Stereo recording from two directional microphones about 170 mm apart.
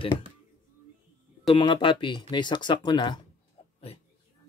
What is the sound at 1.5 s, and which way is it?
Speech, 25° left (ahead or behind).